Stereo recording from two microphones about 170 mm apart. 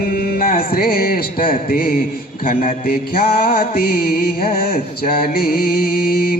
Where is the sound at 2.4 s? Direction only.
60° left (ahead or behind).